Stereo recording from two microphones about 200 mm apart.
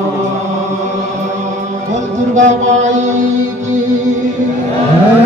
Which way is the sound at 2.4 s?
35° right (ahead or behind).